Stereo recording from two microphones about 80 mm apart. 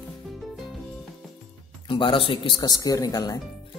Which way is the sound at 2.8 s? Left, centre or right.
Left.